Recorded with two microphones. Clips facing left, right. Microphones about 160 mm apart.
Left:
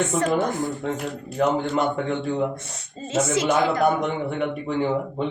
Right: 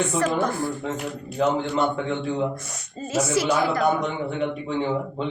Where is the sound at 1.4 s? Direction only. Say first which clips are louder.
Left 1 dB; 60° left (ahead or behind).